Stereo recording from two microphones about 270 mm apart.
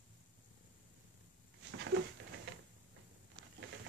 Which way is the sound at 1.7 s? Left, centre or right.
Right.